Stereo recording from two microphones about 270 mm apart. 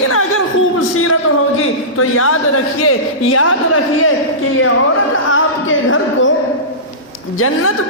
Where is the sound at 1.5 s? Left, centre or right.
Left.